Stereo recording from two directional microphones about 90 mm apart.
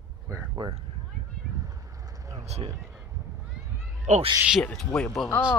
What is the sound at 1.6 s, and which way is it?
Vehicle, 40° right (ahead or behind).